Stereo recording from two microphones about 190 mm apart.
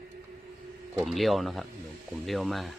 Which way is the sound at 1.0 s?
Centre (ahead or behind).